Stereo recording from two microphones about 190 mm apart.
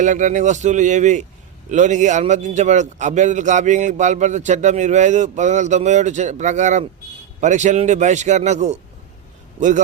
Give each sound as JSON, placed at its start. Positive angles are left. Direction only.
{"t": 0.0, "sound": "a man's voice", "side_deg": -40}